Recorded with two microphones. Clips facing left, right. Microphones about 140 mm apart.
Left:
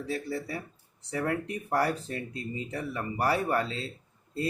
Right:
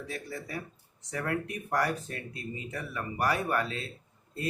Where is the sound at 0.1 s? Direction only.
30° left (ahead or behind).